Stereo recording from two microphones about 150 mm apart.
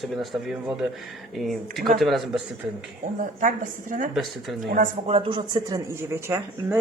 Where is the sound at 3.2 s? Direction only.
60° right (ahead or behind).